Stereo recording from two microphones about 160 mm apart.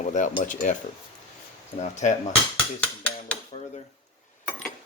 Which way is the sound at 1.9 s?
50° left (ahead or behind).